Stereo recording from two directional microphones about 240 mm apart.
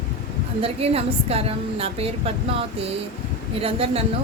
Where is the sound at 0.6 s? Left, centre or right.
Right.